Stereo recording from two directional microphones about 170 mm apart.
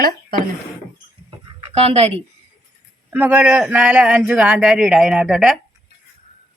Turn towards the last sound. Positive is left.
turn(degrees=-5)  # may be behind; listen again after turning